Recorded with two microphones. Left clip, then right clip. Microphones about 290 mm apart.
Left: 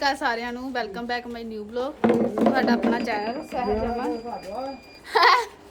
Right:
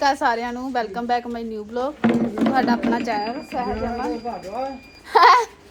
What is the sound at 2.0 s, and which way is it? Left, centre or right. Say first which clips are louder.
Speech: left 3 dB; left.